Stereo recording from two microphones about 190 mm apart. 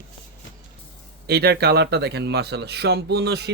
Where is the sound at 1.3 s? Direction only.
55° right (ahead or behind).